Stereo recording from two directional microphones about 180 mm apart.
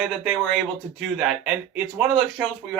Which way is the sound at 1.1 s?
Centre (ahead or behind).